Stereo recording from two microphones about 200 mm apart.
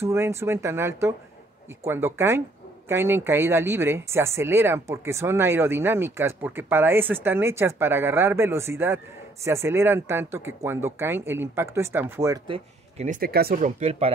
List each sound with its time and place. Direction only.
0.0 s speech: 15° right (ahead or behind)
12.4 s speech: 30° right (ahead or behind)